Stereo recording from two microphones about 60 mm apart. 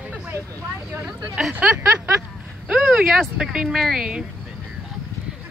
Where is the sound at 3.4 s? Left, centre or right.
Centre.